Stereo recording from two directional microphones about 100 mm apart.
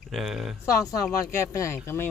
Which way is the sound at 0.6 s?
30° left (ahead or behind).